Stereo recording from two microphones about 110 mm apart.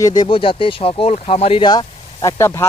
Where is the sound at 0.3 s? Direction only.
55° left (ahead or behind).